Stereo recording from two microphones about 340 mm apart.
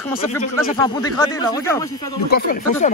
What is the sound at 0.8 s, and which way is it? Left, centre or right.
Speech, centre.